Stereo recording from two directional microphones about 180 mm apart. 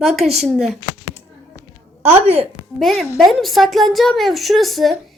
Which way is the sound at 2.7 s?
Centre (ahead or behind).